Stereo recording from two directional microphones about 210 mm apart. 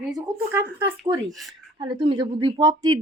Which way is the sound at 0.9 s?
15° right (ahead or behind).